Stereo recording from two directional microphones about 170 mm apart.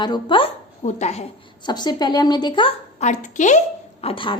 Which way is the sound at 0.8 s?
40° left (ahead or behind).